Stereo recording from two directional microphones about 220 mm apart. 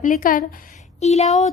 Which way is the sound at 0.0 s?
40° left (ahead or behind).